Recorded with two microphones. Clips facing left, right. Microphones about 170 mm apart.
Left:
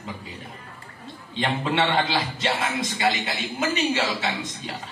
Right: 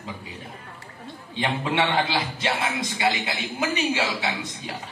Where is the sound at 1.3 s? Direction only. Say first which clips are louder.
Left 1 dB; 15° right (ahead or behind).